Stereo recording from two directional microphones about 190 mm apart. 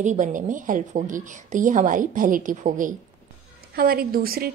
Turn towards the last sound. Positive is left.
turn(degrees=-50)  # may be behind; listen again after turning